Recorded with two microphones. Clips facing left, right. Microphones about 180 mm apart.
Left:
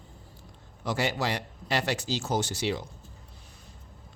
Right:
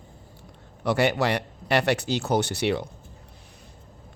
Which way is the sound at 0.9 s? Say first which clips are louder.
Right 6 dB; 65° right (ahead or behind).